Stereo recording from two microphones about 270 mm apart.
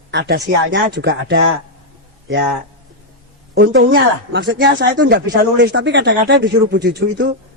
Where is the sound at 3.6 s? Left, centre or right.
Right.